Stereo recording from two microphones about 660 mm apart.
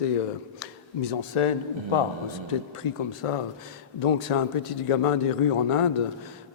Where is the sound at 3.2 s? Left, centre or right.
Left.